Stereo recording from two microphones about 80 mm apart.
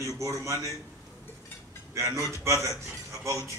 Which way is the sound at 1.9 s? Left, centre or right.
Right.